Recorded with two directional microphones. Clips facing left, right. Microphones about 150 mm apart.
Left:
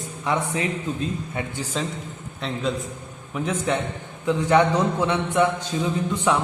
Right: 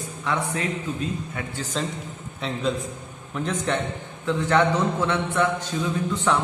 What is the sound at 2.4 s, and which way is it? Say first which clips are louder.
A man's voice: even; centre (ahead or behind).